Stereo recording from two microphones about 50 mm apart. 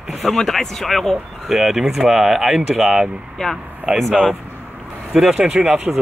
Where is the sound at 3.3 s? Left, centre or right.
Centre.